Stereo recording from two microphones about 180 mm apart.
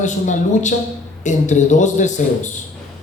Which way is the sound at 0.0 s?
40° left (ahead or behind).